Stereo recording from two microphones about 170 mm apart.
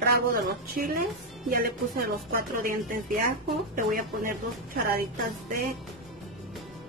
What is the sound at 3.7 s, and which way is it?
Speech, 55° right (ahead or behind).